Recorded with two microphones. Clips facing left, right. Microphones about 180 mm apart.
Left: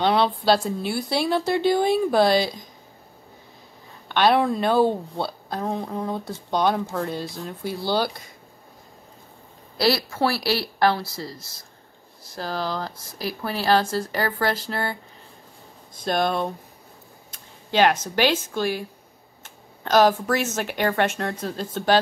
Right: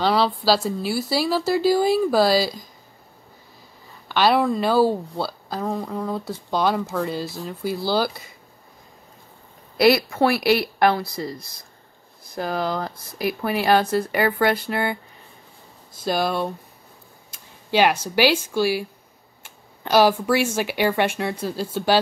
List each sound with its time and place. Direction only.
0.0 s a woman's voice: centre (ahead or behind)
4.1 s a woman's voice: 5° right (ahead or behind)
9.8 s speech: 15° right (ahead or behind)
16.0 s a woman's voice: 5° right (ahead or behind)
17.3 s a sound: 10° right (ahead or behind)
18.0 s speech: 10° right (ahead or behind)